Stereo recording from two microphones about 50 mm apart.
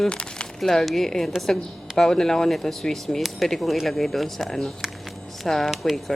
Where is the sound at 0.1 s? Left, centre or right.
Centre.